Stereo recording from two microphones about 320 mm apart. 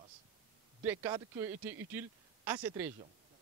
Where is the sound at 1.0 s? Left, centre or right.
Centre.